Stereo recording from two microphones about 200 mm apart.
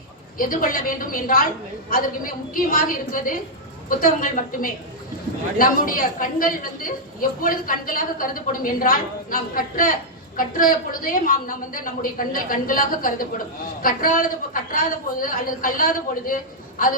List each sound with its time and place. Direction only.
0.3 s a woman's voice: 45° left (ahead or behind)